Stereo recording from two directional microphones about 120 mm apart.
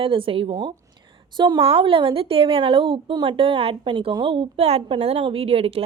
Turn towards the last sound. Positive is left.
turn(degrees=-50)  # may be behind; listen again after turning